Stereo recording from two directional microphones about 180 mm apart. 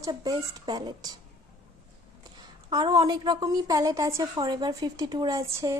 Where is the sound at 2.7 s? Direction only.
20° right (ahead or behind).